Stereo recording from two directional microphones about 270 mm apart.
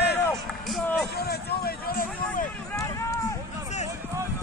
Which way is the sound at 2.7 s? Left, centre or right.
Centre.